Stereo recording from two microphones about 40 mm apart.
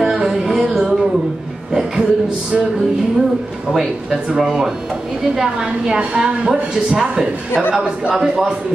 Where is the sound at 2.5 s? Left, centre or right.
Centre.